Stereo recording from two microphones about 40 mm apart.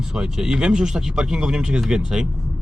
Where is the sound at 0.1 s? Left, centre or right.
Centre.